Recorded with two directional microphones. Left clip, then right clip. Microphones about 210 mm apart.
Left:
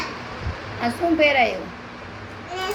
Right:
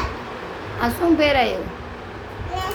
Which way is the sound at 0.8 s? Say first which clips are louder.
Right 1 dB; 15° right (ahead or behind).